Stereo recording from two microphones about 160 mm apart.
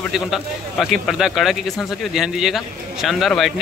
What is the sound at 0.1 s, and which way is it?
A man's voice, centre (ahead or behind).